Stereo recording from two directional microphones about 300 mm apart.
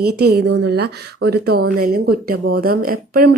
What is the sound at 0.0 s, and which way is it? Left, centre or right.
A woman's voice, right.